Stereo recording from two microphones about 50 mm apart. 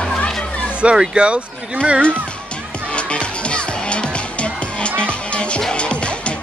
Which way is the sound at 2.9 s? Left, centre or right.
Left.